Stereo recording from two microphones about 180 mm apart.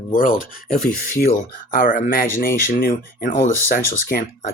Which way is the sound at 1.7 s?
50° left (ahead or behind).